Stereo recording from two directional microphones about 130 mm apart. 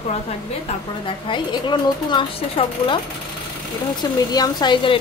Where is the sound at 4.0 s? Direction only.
30° left (ahead or behind).